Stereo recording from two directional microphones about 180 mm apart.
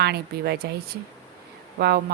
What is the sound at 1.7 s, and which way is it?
Speech, 60° right (ahead or behind).